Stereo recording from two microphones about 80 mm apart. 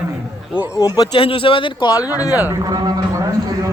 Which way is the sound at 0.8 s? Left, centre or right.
Left.